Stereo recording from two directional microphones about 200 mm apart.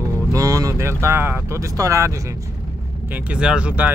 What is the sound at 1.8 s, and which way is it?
Speech, 15° right (ahead or behind).